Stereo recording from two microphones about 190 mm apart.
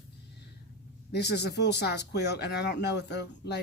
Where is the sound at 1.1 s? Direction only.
60° left (ahead or behind).